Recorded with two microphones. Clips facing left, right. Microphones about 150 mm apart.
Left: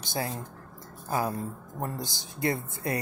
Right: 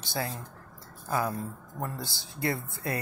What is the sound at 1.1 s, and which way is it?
Speech, 30° left (ahead or behind).